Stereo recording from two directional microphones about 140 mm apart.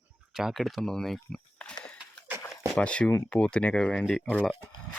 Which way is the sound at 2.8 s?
5° left (ahead or behind).